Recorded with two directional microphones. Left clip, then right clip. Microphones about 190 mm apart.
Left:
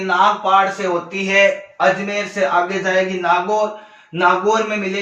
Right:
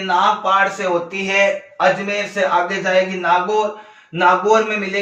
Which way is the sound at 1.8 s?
15° right (ahead or behind).